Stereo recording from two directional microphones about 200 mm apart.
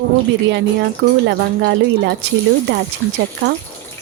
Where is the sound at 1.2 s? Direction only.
55° right (ahead or behind).